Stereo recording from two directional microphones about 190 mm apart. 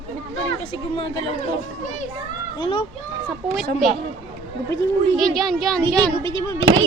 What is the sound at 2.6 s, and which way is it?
Speech, 30° left (ahead or behind).